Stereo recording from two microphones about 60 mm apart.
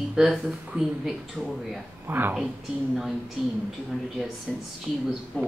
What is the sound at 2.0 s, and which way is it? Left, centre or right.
Speech, right.